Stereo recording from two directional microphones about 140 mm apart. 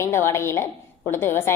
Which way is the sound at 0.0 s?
20° left (ahead or behind).